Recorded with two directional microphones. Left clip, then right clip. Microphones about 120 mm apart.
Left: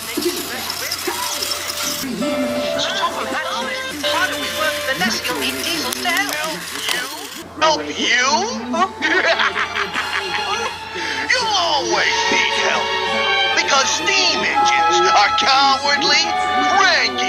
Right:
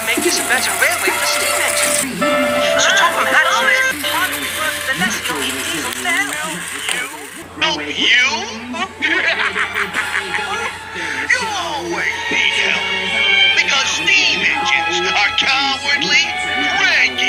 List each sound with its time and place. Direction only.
2.2 s music: 5° right (ahead or behind)
4.0 s music: 45° left (ahead or behind)
7.6 s speech: 45° left (ahead or behind)
11.3 s music: 75° left (ahead or behind)
12.3 s music: 45° left (ahead or behind)